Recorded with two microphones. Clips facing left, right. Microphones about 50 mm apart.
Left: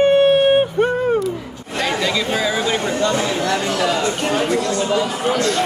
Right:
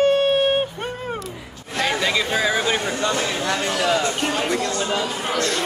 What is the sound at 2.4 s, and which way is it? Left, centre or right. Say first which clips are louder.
Speech: left 1 dB; right.